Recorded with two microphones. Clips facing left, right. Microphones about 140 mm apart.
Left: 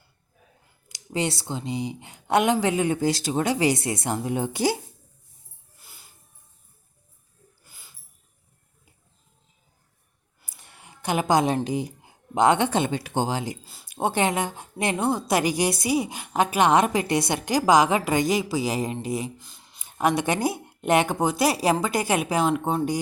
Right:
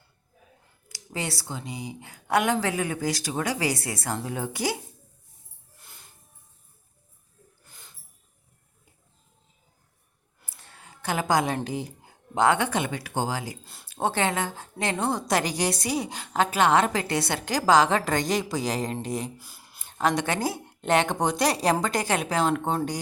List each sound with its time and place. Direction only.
0.9 s speech: 20° left (ahead or behind)
5.8 s music: 5° left (ahead or behind)
7.6 s a sound: 5° left (ahead or behind)
10.4 s a woman's voice: 15° left (ahead or behind)
19.4 s a sound: 5° right (ahead or behind)
19.8 s a woman's voice: 10° left (ahead or behind)